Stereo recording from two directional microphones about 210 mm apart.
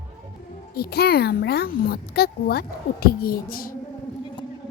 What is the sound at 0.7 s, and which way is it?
A child's voice, 50° left (ahead or behind).